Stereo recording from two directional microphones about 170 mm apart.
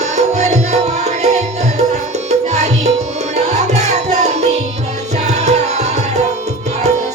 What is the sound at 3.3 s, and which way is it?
Music, 40° right (ahead or behind).